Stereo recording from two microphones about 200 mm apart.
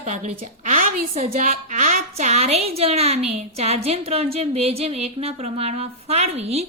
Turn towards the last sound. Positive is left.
turn(degrees=-30)  # may be behind; listen again after turning